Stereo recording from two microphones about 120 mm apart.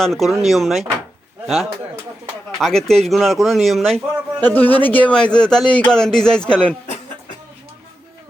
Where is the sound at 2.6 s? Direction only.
5° left (ahead or behind).